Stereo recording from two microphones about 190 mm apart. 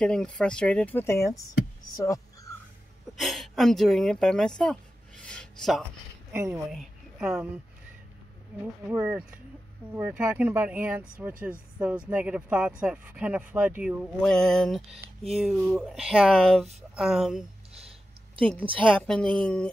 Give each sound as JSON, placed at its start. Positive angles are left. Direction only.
{"t": 0.0, "sound": "speech", "side_deg": 5}
{"t": 2.0, "sound": "a sound", "side_deg": 15}
{"t": 3.2, "sound": "speech", "side_deg": 0}
{"t": 6.3, "sound": "speech", "side_deg": -15}
{"t": 6.7, "sound": "a woman's voice", "side_deg": 0}
{"t": 8.8, "sound": "speech", "side_deg": -15}
{"t": 14.2, "sound": "speech", "side_deg": 5}
{"t": 17.7, "sound": "a sound", "side_deg": -30}
{"t": 18.4, "sound": "a woman's voice", "side_deg": 5}